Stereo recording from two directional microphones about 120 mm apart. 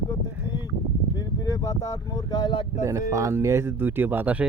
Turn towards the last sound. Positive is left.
turn(degrees=-10)  # may be behind; listen again after turning